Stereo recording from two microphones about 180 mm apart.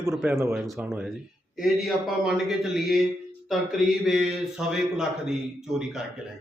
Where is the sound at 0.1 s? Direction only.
Centre (ahead or behind).